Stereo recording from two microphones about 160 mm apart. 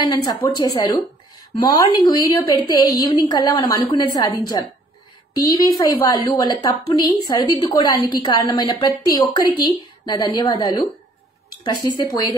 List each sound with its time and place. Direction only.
0.0 s a woman's voice: 25° left (ahead or behind)